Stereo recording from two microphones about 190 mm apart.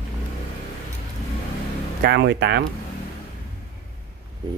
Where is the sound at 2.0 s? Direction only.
60° right (ahead or behind).